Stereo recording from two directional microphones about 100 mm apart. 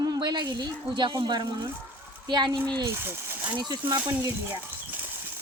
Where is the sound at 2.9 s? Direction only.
25° right (ahead or behind).